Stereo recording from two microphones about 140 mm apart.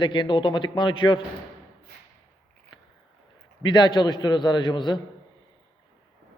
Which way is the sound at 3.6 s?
30° left (ahead or behind).